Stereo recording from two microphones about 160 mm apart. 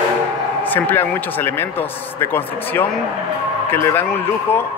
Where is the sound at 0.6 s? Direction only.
10° left (ahead or behind).